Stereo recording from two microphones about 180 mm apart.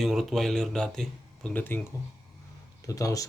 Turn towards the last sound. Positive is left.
turn(degrees=20)  # may be behind; listen again after turning